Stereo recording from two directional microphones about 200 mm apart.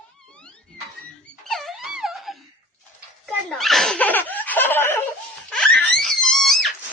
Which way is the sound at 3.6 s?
Centre (ahead or behind).